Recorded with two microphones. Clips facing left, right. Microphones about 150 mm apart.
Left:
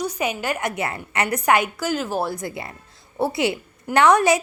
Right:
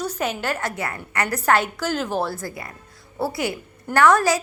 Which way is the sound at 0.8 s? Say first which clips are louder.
Left 2 dB; 25° left (ahead or behind).